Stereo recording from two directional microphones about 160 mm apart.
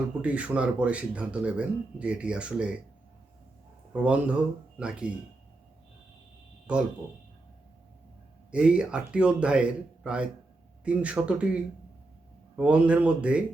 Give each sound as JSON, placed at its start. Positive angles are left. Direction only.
{"t": 0.2, "sound": "speech", "side_deg": -10}
{"t": 3.9, "sound": "speech", "side_deg": -10}
{"t": 6.7, "sound": "speech", "side_deg": -5}
{"t": 8.4, "sound": "speech", "side_deg": -5}
{"t": 12.5, "sound": "speech", "side_deg": -10}